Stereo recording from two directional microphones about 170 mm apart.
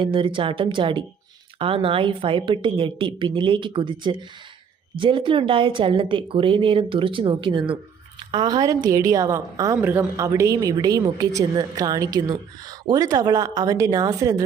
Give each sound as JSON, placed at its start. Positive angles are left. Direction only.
{"t": 0.0, "sound": "a woman's voice", "side_deg": -30}